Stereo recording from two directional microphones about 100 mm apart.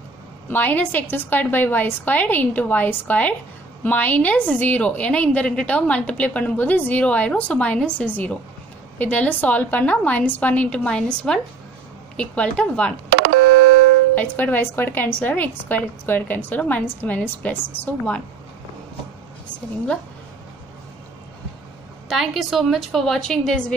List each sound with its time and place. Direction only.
0.5 s a woman's voice: 20° left (ahead or behind)
14.1 s a woman's voice: 20° left (ahead or behind)
22.1 s a woman's voice: centre (ahead or behind)